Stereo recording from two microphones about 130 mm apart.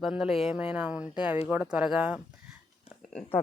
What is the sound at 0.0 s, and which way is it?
Speech, 5° right (ahead or behind).